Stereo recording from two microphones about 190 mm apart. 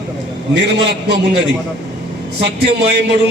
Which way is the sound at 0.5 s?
65° right (ahead or behind).